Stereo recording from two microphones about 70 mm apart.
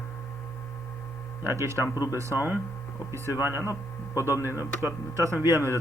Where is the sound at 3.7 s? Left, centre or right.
Left.